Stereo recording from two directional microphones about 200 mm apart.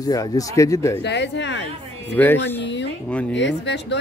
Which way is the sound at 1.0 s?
60° left (ahead or behind).